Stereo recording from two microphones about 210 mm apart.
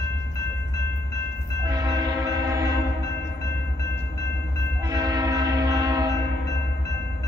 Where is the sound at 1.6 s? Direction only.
15° right (ahead or behind).